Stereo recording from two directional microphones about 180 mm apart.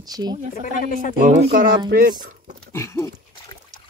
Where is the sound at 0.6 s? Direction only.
50° left (ahead or behind).